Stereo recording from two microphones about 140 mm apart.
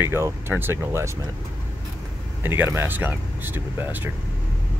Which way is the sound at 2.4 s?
15° right (ahead or behind).